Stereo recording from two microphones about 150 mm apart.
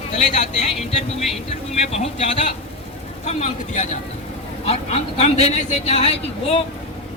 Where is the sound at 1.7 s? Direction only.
45° left (ahead or behind).